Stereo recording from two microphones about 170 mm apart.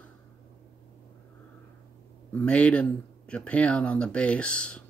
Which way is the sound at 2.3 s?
10° left (ahead or behind).